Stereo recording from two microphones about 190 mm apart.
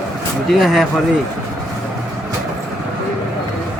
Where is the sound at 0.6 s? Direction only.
Centre (ahead or behind).